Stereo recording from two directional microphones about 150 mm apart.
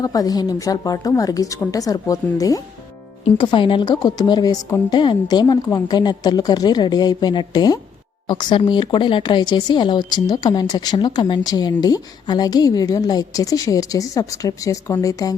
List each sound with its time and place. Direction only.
0.0 s speech: 25° left (ahead or behind)